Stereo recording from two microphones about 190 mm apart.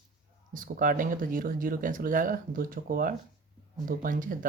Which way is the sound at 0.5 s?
45° right (ahead or behind).